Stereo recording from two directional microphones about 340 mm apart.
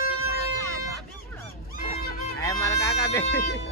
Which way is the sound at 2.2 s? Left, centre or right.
Centre.